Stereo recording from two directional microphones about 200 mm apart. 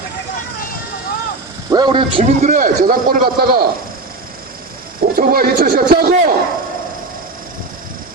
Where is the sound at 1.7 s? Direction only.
25° right (ahead or behind).